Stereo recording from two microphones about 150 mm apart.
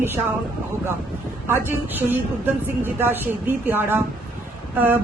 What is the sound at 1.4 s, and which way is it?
A woman's voice, 15° right (ahead or behind).